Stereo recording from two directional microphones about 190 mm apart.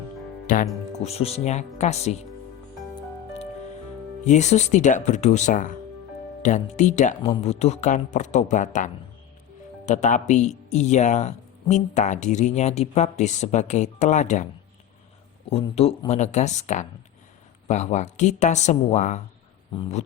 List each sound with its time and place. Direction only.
0.5 s speech: 45° left (ahead or behind)
0.9 s speech: 30° left (ahead or behind)
4.2 s speech: 40° left (ahead or behind)
15.4 s speech: 30° left (ahead or behind)